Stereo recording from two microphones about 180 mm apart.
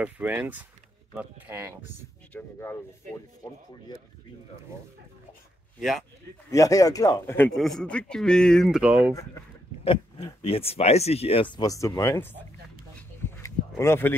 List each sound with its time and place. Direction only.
0.0 s speech: 10° right (ahead or behind)
2.3 s speech: 10° left (ahead or behind)
5.8 s a man's voice: centre (ahead or behind)
6.5 s a man's voice: 20° left (ahead or behind); by 9.1 s 10° right (ahead or behind)
9.8 s speech: 30° left (ahead or behind); by 12.4 s 15° left (ahead or behind)
13.2 s a sound: 15° left (ahead or behind)